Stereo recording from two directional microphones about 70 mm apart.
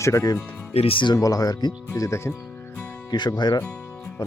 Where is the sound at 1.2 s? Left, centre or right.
Left.